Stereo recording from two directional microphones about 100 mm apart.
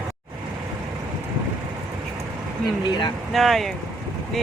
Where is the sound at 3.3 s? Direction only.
Centre (ahead or behind).